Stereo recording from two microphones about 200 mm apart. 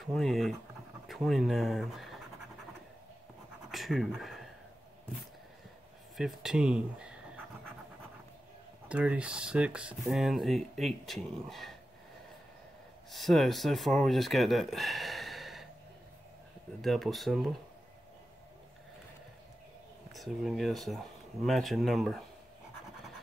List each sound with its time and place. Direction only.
0.0 s speech: centre (ahead or behind)
3.7 s speech: centre (ahead or behind)
6.1 s pant: centre (ahead or behind)
8.8 s speech: 5° right (ahead or behind)
13.1 s speech: centre (ahead or behind)
16.8 s speech: centre (ahead or behind)
20.1 s speech: centre (ahead or behind)